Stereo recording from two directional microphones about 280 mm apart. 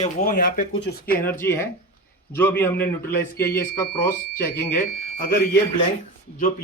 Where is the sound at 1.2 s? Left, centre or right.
Centre.